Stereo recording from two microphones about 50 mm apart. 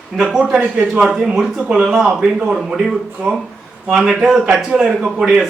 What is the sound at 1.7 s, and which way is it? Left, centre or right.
Speech, right.